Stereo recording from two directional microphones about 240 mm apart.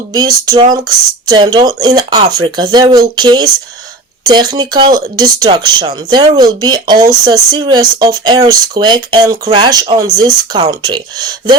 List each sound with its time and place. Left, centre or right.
0.1 s speech: centre